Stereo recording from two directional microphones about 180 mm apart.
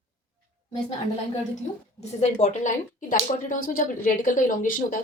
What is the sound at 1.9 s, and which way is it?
Speech, 40° left (ahead or behind).